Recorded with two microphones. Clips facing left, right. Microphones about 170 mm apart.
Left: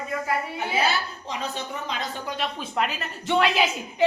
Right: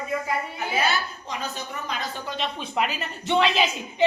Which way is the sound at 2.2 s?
10° left (ahead or behind).